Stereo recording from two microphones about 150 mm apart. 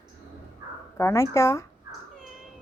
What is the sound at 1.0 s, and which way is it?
Speech, 20° left (ahead or behind).